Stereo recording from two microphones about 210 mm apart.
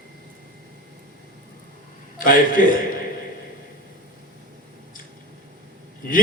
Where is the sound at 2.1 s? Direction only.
40° left (ahead or behind).